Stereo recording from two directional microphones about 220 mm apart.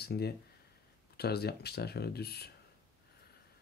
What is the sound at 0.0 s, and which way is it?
Speech, 45° left (ahead or behind).